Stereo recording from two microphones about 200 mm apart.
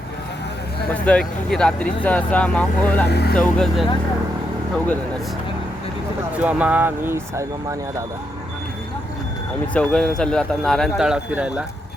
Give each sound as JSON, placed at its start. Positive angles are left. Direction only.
{"t": 0.9, "sound": "speech", "side_deg": 5}
{"t": 3.1, "sound": "speech", "side_deg": 55}
{"t": 3.3, "sound": "speech", "side_deg": 5}
{"t": 6.3, "sound": "speech", "side_deg": -5}
{"t": 9.7, "sound": "speech", "side_deg": 5}